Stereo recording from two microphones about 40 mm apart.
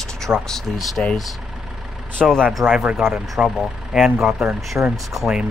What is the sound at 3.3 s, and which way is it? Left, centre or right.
Speech, centre.